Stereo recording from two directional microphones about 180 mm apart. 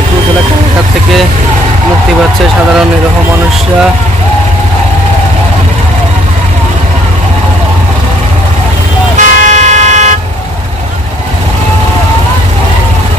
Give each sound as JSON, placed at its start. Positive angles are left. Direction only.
{"t": 9.1, "sound": "vehicle", "side_deg": -40}